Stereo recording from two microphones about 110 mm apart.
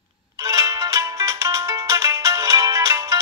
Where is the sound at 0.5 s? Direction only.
30° right (ahead or behind).